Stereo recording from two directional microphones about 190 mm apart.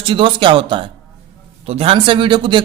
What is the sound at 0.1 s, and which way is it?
Speech, 25° right (ahead or behind).